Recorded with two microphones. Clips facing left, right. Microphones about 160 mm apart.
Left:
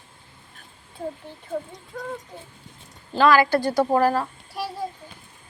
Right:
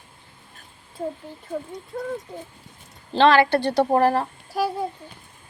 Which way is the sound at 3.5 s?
70° right (ahead or behind).